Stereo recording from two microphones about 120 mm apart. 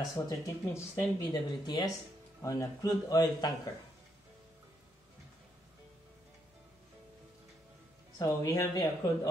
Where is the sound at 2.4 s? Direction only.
25° left (ahead or behind).